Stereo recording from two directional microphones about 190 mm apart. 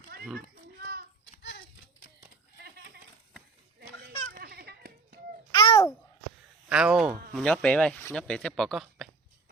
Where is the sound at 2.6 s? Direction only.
60° right (ahead or behind).